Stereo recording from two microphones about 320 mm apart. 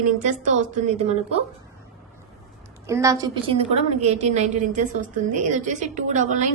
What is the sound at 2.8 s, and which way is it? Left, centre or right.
A woman's voice, centre.